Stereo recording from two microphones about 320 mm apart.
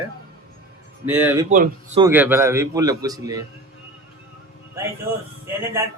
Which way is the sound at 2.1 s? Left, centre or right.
Centre.